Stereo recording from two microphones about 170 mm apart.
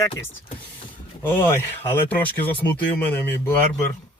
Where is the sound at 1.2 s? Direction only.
15° left (ahead or behind).